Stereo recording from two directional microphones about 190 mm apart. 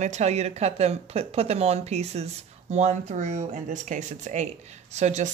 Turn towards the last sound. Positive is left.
turn(degrees=-35)  # may be behind; listen again after turning